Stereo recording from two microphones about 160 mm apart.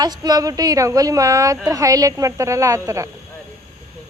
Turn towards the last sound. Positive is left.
turn(degrees=-20)  # may be behind; listen again after turning